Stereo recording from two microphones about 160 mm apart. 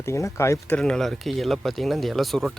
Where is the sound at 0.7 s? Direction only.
5° left (ahead or behind).